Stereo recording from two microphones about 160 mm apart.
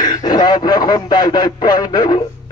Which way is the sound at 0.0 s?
25° left (ahead or behind).